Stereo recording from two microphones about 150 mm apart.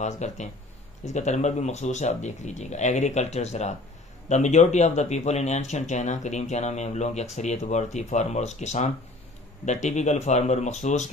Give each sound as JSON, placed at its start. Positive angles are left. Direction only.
{"t": 0.0, "sound": "speech", "side_deg": 50}